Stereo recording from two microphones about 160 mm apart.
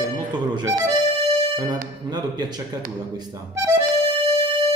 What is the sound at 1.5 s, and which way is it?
Speech, 25° right (ahead or behind).